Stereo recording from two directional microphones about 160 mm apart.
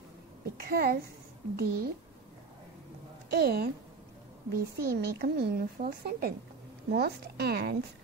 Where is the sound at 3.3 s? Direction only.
90° right; by 6.3 s 70° right (ahead or behind).